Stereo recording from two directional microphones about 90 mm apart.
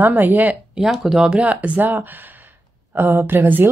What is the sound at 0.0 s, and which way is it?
Speech, 20° right (ahead or behind).